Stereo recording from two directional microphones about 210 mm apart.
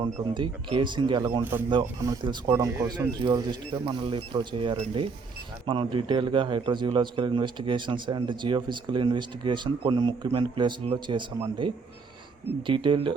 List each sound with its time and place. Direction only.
0.0 s a man's voice: 20° right (ahead or behind)